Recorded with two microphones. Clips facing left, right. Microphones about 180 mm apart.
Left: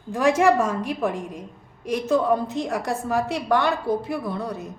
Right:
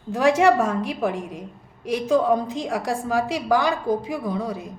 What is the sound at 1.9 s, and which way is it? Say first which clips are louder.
A woman's voice: right 1 dB; 5° left (ahead or behind).